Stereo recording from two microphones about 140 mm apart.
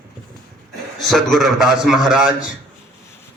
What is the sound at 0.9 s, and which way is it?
A man's voice, centre (ahead or behind).